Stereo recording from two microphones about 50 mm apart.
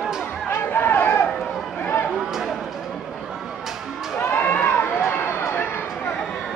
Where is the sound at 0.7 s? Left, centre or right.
Left.